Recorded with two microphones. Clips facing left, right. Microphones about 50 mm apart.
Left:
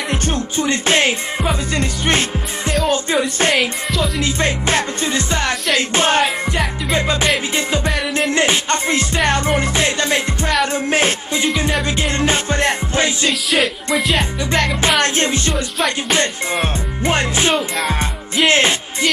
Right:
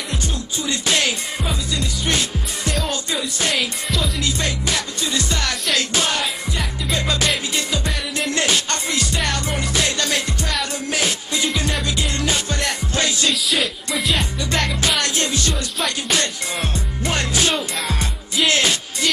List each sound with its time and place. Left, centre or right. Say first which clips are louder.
0.3 s music: left 8 dB; left
1.4 s music: left 6 dB; left
3.5 s music: left 5 dB; centre
4.2 s music: left 5 dB; left
6.2 s music: left 6 dB; centre
6.9 s music: left 3 dB; left
8.3 s music: left 3 dB; left
13.3 s music: left 4 dB; centre
14.8 s music: left 5 dB; left